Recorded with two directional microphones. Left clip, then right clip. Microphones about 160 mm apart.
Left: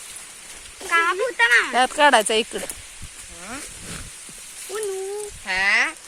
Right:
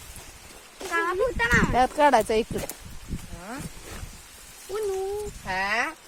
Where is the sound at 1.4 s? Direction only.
40° right (ahead or behind).